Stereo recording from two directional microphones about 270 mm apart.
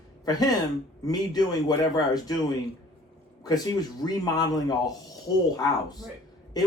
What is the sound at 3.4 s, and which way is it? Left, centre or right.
A man's voice, centre.